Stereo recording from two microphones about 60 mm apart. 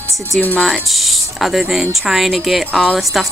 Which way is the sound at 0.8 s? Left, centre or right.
Centre.